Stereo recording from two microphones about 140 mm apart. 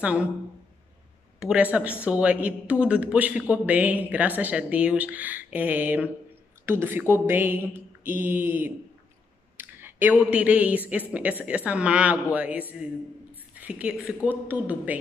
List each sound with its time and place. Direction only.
0.0 s speech: 10° right (ahead or behind)
1.4 s speech: 10° right (ahead or behind)
9.6 s clicking: 15° right (ahead or behind)
10.3 s speech: 10° right (ahead or behind)